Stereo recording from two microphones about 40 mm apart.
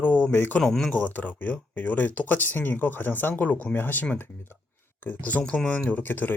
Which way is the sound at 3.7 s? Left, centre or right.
Left.